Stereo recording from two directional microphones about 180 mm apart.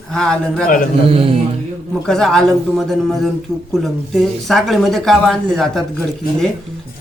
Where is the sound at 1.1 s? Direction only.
30° right (ahead or behind).